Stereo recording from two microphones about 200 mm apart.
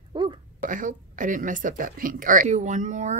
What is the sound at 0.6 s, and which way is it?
Speech, 40° right (ahead or behind).